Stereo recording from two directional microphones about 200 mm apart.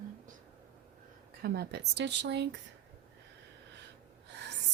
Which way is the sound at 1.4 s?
50° right (ahead or behind).